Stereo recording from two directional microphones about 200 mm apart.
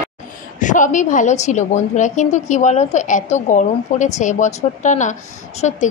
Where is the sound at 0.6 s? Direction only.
40° left (ahead or behind).